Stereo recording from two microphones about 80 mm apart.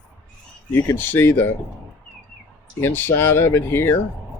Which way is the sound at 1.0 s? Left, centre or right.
Left.